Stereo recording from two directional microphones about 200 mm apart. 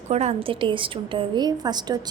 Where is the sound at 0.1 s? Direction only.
35° right (ahead or behind).